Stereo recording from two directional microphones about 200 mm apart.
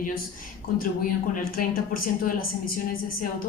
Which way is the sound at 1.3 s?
45° left (ahead or behind).